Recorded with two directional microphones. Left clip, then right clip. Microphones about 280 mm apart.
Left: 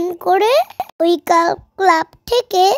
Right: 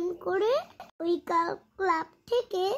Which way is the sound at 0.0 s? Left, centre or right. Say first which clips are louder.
Left 14 dB; left.